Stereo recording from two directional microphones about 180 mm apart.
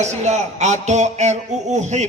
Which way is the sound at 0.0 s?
40° right (ahead or behind).